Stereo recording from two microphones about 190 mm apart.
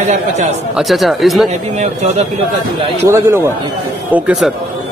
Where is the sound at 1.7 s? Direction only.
35° right (ahead or behind).